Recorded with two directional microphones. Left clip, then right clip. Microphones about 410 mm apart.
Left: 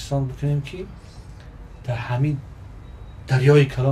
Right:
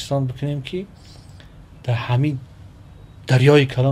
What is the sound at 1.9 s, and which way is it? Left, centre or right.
Speech, right.